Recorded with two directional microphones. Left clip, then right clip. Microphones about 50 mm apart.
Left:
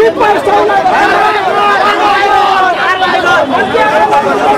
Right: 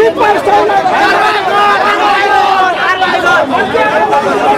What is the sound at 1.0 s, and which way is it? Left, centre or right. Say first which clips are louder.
Speech: left 1 dB; right.